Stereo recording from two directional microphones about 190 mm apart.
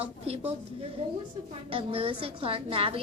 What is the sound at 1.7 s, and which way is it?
A woman's voice, 30° right (ahead or behind).